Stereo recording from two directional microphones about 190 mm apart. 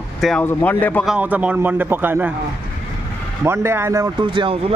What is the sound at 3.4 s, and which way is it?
Speech, 15° right (ahead or behind).